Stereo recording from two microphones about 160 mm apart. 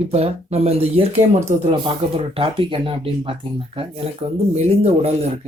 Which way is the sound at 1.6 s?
30° right (ahead or behind).